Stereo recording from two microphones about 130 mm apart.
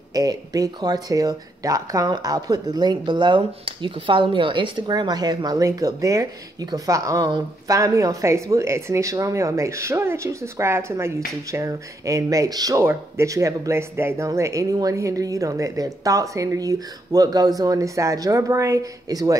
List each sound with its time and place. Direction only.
0.1 s speech: 30° right (ahead or behind)